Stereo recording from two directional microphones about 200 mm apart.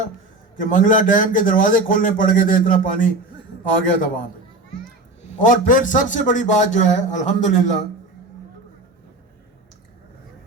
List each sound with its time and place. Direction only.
0.6 s a man's voice: 40° left (ahead or behind)